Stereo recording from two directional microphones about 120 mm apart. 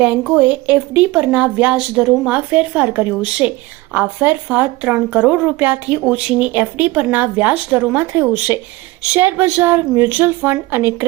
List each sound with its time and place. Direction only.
0.0 s speech: 10° right (ahead or behind)